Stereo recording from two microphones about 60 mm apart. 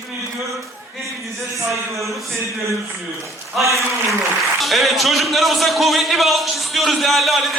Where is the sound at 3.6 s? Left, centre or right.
Right.